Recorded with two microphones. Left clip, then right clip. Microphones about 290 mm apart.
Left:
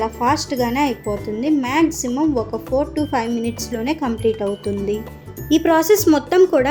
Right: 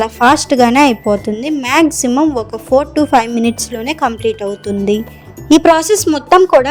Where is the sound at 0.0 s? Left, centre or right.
Right.